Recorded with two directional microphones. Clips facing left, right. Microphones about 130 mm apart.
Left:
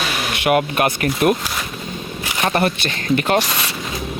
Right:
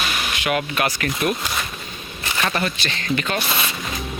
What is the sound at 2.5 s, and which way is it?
Speech, 55° left (ahead or behind).